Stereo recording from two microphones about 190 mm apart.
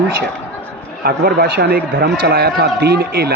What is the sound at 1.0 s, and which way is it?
A man's voice, 55° right (ahead or behind).